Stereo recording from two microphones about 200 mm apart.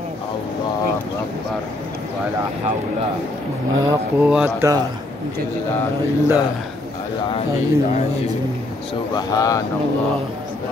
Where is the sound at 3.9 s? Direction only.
10° right (ahead or behind).